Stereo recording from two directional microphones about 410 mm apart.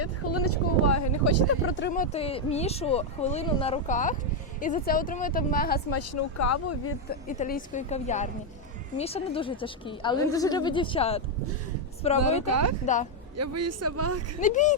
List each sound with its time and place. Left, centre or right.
0.0 s speech: left
5.9 s speech: left
7.3 s a woman's voice: centre
13.3 s speech: right
14.4 s a woman's voice: centre